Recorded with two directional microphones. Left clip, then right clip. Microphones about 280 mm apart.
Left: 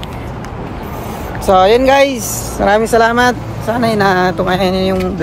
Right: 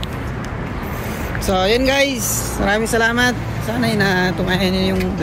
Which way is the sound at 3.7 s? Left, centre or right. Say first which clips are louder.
Left 6 dB; centre.